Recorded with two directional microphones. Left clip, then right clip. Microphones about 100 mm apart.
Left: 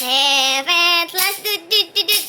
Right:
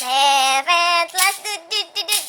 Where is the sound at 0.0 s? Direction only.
55° right (ahead or behind).